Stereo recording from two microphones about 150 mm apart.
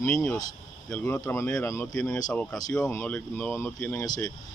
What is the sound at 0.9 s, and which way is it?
Speech, 10° left (ahead or behind).